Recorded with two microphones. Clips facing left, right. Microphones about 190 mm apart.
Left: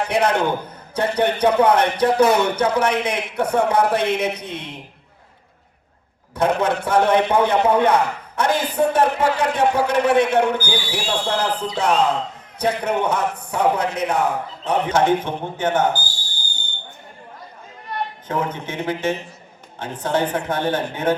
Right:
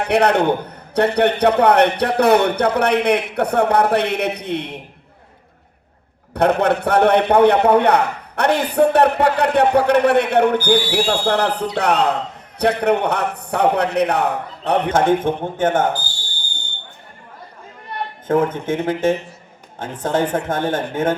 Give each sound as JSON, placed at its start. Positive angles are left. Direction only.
{"t": 0.1, "sound": "a man's voice", "side_deg": -65}
{"t": 6.3, "sound": "a man's voice", "side_deg": -65}
{"t": 18.3, "sound": "a woman's voice", "side_deg": -50}